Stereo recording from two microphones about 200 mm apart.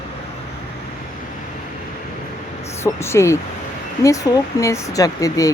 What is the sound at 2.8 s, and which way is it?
Speech, 15° left (ahead or behind).